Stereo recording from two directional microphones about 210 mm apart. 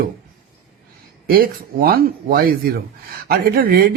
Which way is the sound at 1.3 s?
45° right (ahead or behind).